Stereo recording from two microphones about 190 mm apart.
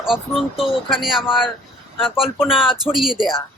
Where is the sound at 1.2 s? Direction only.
25° left (ahead or behind).